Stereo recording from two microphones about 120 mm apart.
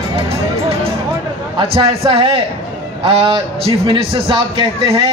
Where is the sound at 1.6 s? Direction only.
45° right (ahead or behind).